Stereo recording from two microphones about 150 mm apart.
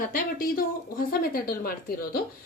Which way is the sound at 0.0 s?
75° left (ahead or behind).